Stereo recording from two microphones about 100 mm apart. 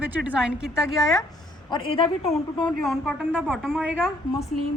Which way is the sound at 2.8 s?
Centre (ahead or behind).